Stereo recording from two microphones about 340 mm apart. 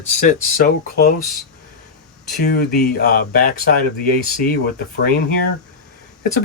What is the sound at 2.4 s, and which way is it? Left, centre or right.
Speech, left.